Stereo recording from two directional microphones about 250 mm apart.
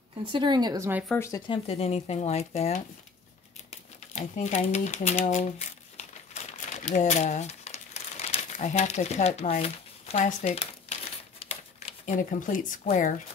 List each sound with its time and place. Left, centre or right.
0.2 s speech: centre
1.0 s speech: centre; by 2.8 s left
4.1 s typewriter: left